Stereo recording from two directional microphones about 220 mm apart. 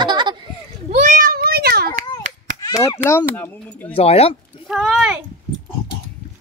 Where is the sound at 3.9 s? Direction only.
25° left (ahead or behind).